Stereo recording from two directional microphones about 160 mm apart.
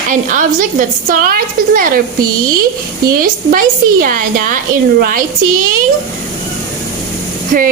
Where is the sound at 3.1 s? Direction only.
65° right (ahead or behind).